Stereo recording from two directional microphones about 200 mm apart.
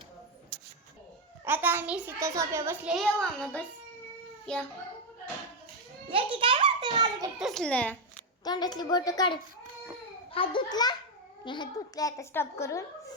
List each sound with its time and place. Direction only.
1.5 s a child's voice: 10° right (ahead or behind)
2.9 s a child's voice: centre (ahead or behind)
6.3 s a sound: 25° right (ahead or behind)
7.3 s a child's voice: centre (ahead or behind)
8.4 s a woman's voice: 20° left (ahead or behind)